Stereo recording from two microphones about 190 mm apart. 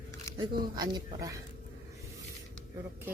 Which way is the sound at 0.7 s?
20° right (ahead or behind).